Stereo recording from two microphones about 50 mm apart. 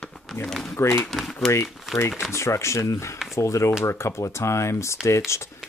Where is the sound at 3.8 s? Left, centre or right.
Left.